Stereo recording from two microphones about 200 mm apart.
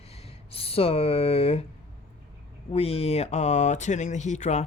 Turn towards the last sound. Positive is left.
turn(degrees=35)  # may be behind; listen again after turning